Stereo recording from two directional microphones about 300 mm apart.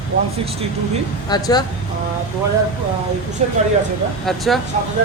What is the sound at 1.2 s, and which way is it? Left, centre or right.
Speech, centre.